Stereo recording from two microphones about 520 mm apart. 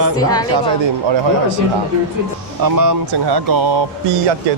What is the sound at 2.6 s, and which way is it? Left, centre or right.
Speech, right.